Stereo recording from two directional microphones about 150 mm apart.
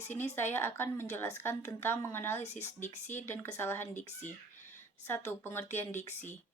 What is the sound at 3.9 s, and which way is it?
Speech, 55° left (ahead or behind).